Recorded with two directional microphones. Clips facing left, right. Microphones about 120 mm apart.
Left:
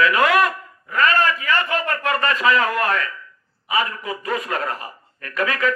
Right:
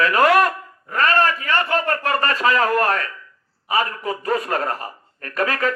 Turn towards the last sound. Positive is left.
turn(degrees=-40)  # may be behind; listen again after turning